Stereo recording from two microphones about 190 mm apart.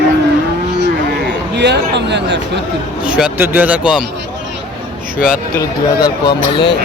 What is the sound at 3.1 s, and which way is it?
Speech, 5° right (ahead or behind).